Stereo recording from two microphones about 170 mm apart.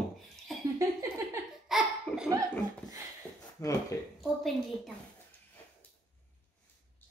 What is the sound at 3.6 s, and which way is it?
Speech, 15° left (ahead or behind).